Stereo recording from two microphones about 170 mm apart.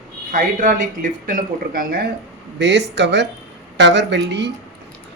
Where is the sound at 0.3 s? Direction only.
50° right (ahead or behind).